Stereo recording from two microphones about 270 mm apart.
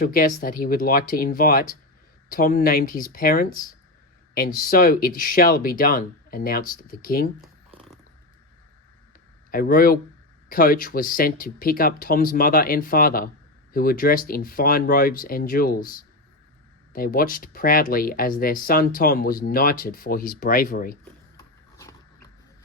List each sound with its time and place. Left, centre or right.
0.0 s speech: left
7.4 s a sound: centre
9.5 s speech: left